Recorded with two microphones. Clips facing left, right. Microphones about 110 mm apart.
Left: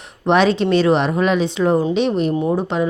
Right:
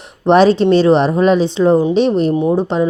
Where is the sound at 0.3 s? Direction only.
35° right (ahead or behind).